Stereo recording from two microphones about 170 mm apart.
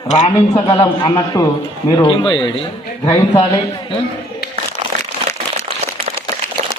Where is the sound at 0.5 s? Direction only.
10° left (ahead or behind); by 2.5 s 30° left (ahead or behind).